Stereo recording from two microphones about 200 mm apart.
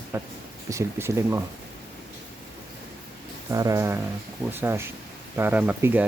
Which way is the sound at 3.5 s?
15° right (ahead or behind).